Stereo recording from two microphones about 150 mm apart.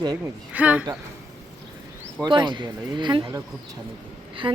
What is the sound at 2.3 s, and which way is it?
Speech, 30° right (ahead or behind).